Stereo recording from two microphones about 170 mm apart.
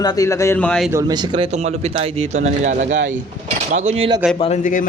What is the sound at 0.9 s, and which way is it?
Speech, 25° right (ahead or behind).